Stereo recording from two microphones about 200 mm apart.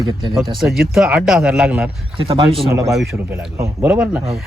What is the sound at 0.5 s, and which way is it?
A man's voice, centre (ahead or behind).